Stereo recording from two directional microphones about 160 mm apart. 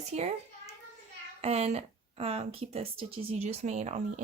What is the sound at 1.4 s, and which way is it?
Speech, 40° right (ahead or behind).